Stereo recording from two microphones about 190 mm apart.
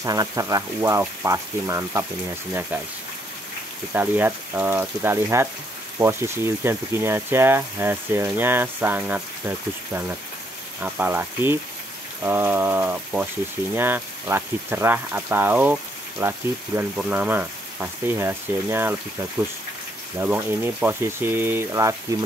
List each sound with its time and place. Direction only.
0.0 s speech: 20° right (ahead or behind)
3.9 s speech: 10° right (ahead or behind)
20.2 s speech: 10° right (ahead or behind)